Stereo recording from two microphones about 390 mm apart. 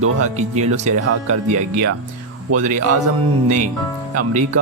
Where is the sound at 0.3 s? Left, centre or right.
Centre.